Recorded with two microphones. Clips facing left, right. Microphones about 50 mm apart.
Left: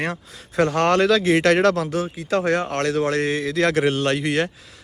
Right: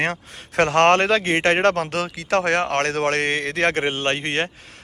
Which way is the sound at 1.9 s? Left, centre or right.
Right.